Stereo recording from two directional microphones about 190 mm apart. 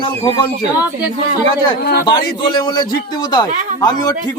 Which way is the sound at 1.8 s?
55° left (ahead or behind).